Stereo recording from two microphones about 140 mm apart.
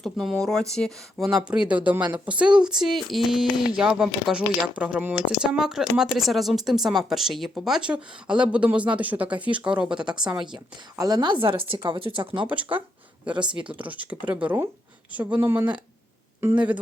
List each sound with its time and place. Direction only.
0.0 s a woman's voice: centre (ahead or behind)
10.4 s a woman's voice: 30° right (ahead or behind)
13.2 s speech: 10° right (ahead or behind)